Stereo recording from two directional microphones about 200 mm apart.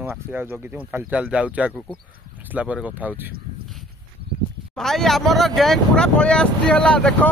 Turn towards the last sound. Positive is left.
turn(degrees=5)  # may be behind; listen again after turning